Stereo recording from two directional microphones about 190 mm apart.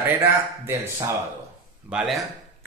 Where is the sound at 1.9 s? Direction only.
Centre (ahead or behind).